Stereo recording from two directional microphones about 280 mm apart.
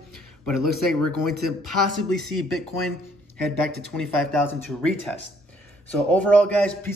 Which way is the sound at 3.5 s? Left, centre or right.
Centre.